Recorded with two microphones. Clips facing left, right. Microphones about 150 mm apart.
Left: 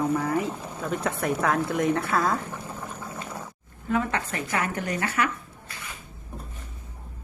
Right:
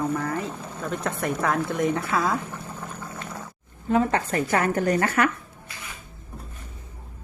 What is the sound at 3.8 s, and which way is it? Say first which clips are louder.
A woman's voice: right 4 dB; 35° right (ahead or behind).